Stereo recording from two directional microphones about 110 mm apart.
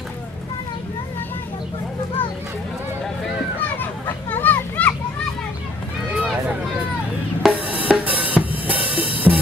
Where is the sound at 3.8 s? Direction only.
15° left (ahead or behind).